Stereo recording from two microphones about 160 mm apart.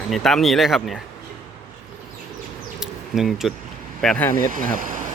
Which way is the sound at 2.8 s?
5° right (ahead or behind).